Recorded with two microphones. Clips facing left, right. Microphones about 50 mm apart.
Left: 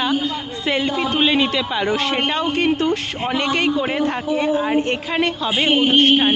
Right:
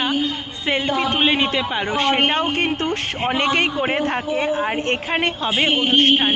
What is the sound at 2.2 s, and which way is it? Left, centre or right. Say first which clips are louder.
Speech: right 1 dB; right.